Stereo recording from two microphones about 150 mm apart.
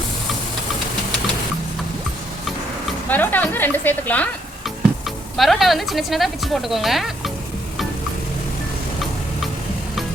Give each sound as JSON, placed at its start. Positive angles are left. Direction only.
{"t": 3.1, "sound": "speech", "side_deg": 10}
{"t": 4.6, "sound": "speech", "side_deg": 0}